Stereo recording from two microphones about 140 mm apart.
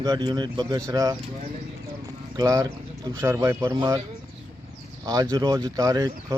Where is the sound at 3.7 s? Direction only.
30° right (ahead or behind).